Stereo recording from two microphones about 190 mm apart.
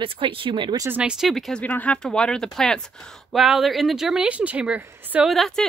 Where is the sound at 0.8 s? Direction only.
5° right (ahead or behind).